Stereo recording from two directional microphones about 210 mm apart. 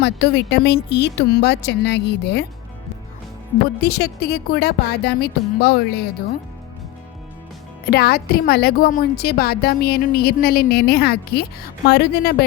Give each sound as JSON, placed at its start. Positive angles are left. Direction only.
{"t": 0.0, "sound": "a woman's voice", "side_deg": 55}
{"t": 3.8, "sound": "a woman's voice", "side_deg": 50}
{"t": 7.9, "sound": "a woman's voice", "side_deg": 50}